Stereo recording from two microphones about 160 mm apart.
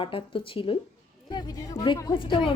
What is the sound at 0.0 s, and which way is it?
Speech, 35° left (ahead or behind).